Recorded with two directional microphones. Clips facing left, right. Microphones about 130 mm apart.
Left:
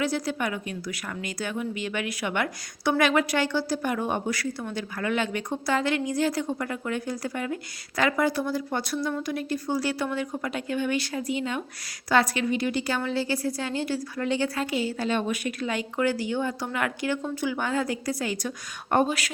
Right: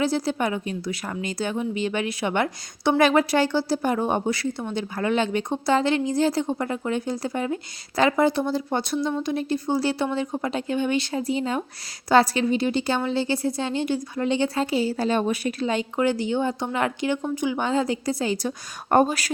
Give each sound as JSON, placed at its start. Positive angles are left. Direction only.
{"t": 0.0, "sound": "a woman's voice", "side_deg": -30}
{"t": 18.9, "sound": "speech", "side_deg": -40}